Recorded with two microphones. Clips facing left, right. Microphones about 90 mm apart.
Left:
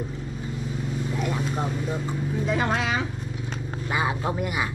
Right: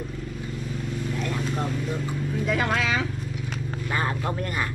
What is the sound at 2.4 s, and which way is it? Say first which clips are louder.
Speech: even; 30° left (ahead or behind).